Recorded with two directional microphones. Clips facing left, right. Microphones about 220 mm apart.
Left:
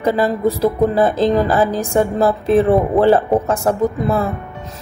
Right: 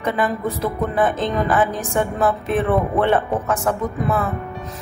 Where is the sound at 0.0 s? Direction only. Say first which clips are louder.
Left 6 dB; 35° left (ahead or behind).